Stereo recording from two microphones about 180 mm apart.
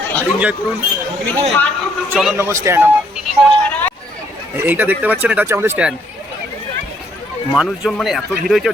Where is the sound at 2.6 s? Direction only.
10° right (ahead or behind).